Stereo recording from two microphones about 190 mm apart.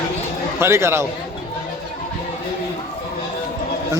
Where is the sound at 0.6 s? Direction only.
15° right (ahead or behind).